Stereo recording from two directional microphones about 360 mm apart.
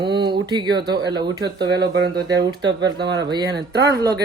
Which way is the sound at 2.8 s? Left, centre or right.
Centre.